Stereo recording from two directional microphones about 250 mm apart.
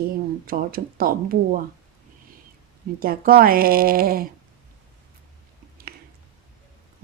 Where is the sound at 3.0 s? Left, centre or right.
Right.